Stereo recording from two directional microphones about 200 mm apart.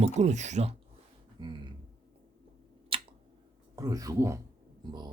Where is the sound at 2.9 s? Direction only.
30° right (ahead or behind).